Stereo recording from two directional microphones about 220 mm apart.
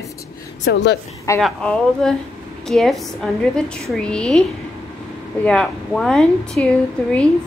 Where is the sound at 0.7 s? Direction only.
45° left (ahead or behind).